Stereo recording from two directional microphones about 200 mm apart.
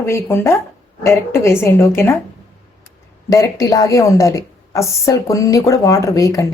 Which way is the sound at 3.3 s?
15° left (ahead or behind).